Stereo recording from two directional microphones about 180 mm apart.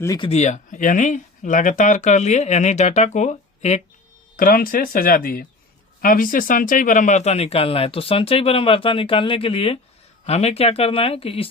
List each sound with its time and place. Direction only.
0.0 s speech: 20° left (ahead or behind)
0.3 s speech: 40° left (ahead or behind)
4.4 s speech: 55° left (ahead or behind); by 11.4 s 30° left (ahead or behind)